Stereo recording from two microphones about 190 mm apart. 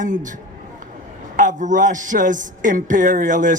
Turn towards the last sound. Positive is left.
turn(degrees=-45)  # may be behind; listen again after turning